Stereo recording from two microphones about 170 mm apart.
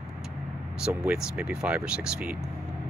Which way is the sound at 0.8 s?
5° right (ahead or behind).